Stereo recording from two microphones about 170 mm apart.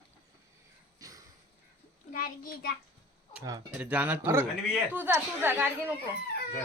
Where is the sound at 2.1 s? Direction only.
55° left (ahead or behind).